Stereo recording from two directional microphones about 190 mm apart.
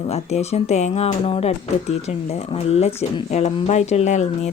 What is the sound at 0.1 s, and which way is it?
Speech, 35° left (ahead or behind).